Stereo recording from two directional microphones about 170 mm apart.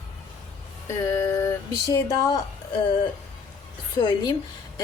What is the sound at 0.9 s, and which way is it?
Speech, 15° left (ahead or behind).